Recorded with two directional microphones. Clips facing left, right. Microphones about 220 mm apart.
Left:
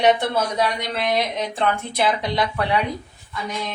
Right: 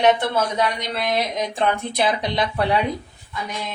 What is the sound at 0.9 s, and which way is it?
Speech, centre (ahead or behind).